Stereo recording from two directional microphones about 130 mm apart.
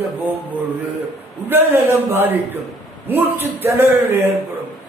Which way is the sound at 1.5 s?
15° right (ahead or behind).